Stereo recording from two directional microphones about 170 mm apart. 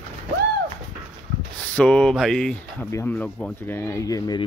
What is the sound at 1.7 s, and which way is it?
Speech, 5° left (ahead or behind).